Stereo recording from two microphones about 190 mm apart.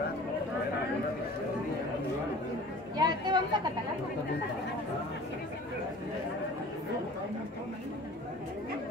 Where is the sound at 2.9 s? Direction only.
20° right (ahead or behind).